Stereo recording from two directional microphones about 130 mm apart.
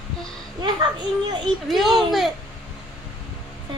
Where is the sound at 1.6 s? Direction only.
Centre (ahead or behind).